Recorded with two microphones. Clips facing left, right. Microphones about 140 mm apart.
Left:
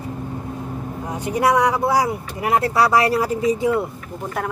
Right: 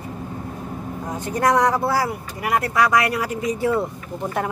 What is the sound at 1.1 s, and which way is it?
Speech, 10° left (ahead or behind).